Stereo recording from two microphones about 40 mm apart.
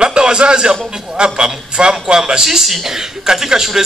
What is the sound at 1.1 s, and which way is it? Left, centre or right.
A man's voice, right.